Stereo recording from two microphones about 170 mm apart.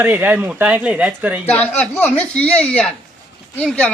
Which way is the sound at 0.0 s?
10° right (ahead or behind).